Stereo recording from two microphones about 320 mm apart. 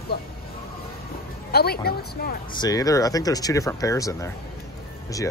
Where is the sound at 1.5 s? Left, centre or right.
Left.